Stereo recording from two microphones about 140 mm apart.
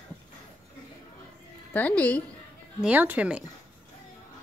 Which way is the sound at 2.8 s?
10° right (ahead or behind).